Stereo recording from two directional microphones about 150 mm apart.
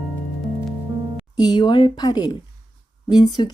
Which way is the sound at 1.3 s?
30° left (ahead or behind).